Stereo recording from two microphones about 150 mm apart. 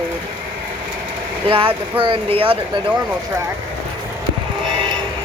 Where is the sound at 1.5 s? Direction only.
35° right (ahead or behind).